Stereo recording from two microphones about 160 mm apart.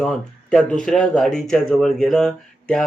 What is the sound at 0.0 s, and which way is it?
Speech, 5° left (ahead or behind).